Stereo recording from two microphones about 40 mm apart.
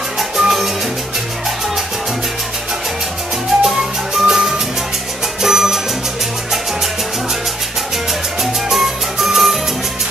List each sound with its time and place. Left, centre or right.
0.2 s music: centre
3.6 s music: centre
8.4 s music: centre